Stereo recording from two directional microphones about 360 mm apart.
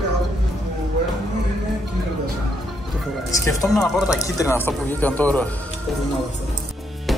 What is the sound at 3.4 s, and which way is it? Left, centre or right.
Speech, centre.